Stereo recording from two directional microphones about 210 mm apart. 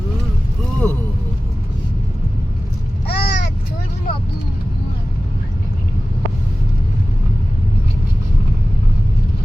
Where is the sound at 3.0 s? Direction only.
50° left (ahead or behind).